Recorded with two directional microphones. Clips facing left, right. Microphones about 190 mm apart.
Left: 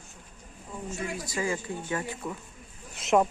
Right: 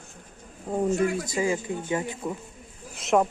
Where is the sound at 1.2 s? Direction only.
20° right (ahead or behind).